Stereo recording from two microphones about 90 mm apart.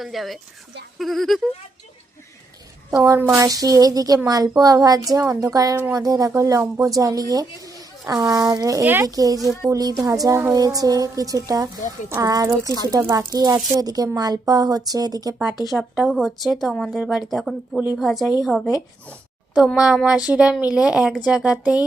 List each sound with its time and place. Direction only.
0.0 s a woman's voice: centre (ahead or behind)
3.0 s a woman's voice: 35° right (ahead or behind)
15.6 s a woman's voice: centre (ahead or behind)
19.7 s speech: 10° right (ahead or behind)